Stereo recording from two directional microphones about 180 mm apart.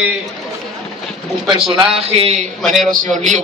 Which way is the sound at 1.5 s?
30° right (ahead or behind).